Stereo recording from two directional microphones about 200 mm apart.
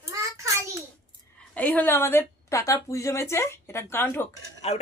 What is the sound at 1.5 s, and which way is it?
A woman's voice, 10° left (ahead or behind).